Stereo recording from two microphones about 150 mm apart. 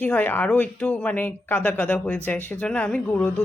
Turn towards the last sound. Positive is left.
turn(degrees=5)  # may be behind; listen again after turning